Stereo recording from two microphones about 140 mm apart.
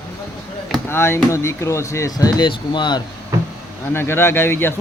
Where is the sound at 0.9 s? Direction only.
15° left (ahead or behind); by 3.0 s 30° left (ahead or behind).